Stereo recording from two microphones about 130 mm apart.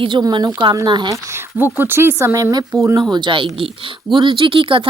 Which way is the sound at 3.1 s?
35° right (ahead or behind).